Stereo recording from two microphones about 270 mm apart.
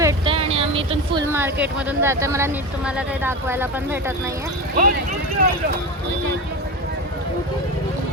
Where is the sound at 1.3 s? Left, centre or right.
Centre.